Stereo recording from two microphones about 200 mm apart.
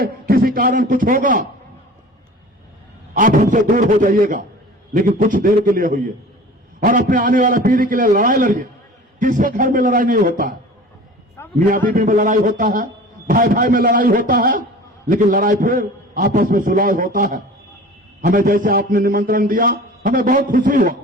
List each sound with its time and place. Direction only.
0.0 s a man's voice: 45° right (ahead or behind)
3.2 s a man's voice: 40° right (ahead or behind)
11.4 s a sound: 10° left (ahead or behind)
11.9 s a man's voice: 45° right (ahead or behind)